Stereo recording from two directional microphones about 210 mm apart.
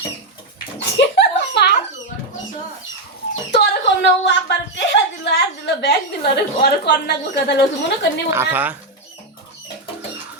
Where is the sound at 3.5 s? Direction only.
55° left (ahead or behind).